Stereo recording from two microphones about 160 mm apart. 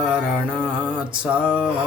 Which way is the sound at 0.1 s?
5° right (ahead or behind).